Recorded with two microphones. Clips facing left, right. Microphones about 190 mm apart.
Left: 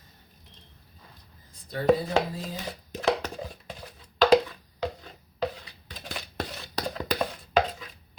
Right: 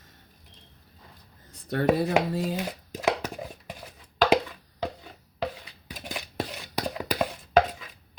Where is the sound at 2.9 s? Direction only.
10° right (ahead or behind).